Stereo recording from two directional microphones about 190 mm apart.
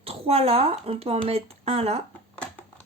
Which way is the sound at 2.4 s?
5° left (ahead or behind).